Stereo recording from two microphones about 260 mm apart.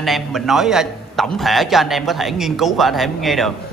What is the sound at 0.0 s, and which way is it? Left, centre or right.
A man's voice, centre.